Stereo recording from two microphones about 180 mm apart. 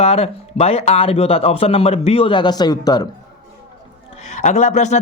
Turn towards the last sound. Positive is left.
turn(degrees=40)  # may be behind; listen again after turning